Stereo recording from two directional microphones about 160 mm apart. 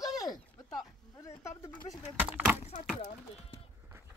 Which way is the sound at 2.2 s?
10° right (ahead or behind).